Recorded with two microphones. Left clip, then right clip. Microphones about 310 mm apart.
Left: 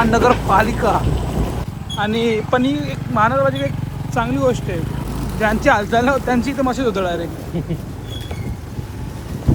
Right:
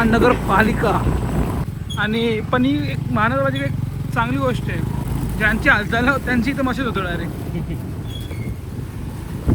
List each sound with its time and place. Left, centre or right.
0.0 s speech: centre